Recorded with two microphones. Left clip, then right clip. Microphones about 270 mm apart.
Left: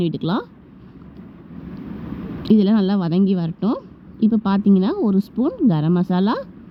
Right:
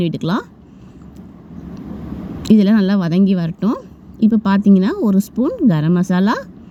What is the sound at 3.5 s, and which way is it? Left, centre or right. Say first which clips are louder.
Speech: right 2 dB; centre.